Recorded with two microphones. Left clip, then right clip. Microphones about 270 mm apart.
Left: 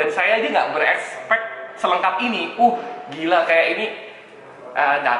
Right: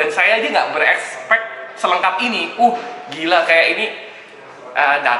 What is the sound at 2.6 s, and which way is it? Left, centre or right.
Speech, left.